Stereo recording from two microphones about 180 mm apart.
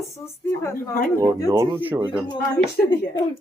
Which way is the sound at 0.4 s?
15° left (ahead or behind).